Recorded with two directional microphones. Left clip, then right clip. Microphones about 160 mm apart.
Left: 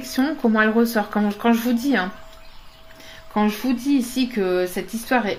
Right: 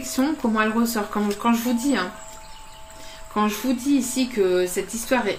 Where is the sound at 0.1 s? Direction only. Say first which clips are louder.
Left 2 dB; 55° left (ahead or behind).